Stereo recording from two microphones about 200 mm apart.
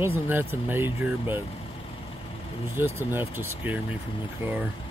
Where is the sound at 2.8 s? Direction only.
10° right (ahead or behind).